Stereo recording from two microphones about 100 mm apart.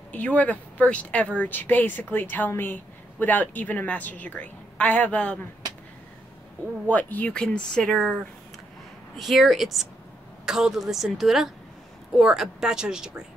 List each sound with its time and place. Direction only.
0.1 s speech: 15° left (ahead or behind)
6.9 s speech: 15° left (ahead or behind)
9.1 s a woman's voice: centre (ahead or behind)